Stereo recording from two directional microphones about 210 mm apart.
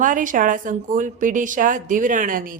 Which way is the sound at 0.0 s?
40° right (ahead or behind).